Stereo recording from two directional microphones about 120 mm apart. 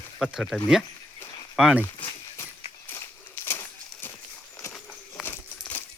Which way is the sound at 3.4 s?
15° left (ahead or behind).